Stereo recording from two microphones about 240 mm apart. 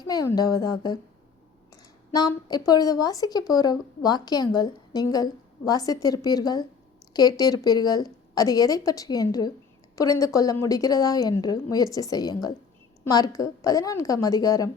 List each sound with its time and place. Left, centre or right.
0.1 s speech: centre